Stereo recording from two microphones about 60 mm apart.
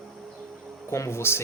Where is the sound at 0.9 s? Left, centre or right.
Left.